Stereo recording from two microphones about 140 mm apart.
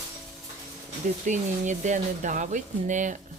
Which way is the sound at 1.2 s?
60° right (ahead or behind).